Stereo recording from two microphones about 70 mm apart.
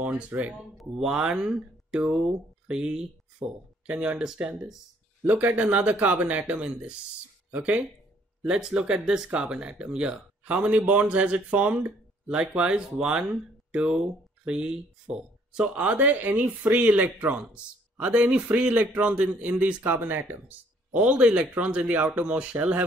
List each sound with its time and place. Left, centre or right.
0.0 s speech: right
0.7 s speech: centre
5.2 s speech: right